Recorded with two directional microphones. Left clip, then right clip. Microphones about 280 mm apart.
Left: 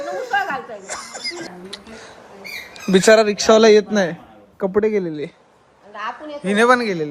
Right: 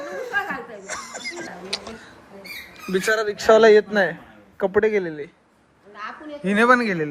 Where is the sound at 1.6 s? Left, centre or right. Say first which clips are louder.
Right 5 dB; centre.